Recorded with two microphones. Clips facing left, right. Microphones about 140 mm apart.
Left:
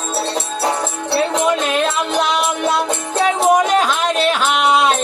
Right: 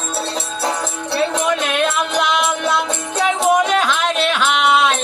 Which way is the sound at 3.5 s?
40° left (ahead or behind).